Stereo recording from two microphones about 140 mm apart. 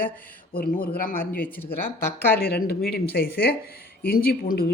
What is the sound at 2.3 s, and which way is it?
Speech, 90° left.